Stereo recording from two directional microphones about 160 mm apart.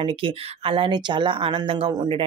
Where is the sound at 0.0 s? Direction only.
35° right (ahead or behind).